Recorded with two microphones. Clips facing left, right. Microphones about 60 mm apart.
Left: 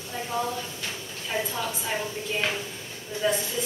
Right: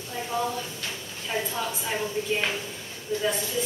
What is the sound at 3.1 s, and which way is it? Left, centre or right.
Speech, left.